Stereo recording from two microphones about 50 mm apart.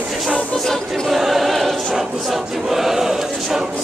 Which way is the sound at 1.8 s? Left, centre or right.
Centre.